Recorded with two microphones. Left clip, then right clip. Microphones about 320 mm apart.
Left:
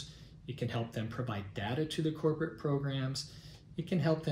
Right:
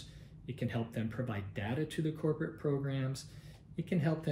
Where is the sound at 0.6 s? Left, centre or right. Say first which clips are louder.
Left 1 dB; centre.